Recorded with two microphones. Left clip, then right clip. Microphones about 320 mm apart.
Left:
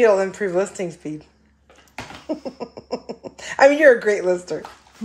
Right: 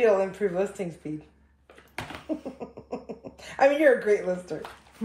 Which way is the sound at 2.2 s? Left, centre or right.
Left.